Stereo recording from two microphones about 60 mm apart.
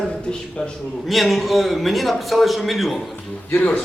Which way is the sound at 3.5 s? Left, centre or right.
Left.